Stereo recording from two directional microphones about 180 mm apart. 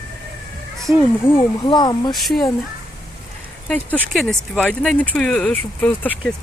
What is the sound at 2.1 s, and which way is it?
Speech, centre (ahead or behind).